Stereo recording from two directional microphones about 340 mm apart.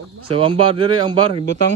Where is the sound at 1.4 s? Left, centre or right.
Right.